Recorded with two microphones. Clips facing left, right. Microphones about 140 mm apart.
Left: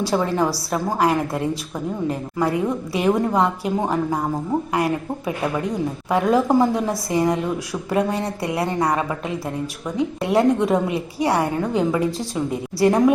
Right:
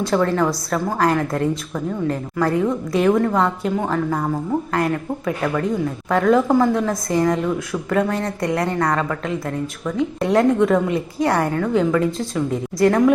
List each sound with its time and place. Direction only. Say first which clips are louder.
0.1 s a woman's voice: right 4 dB; 15° left (ahead or behind)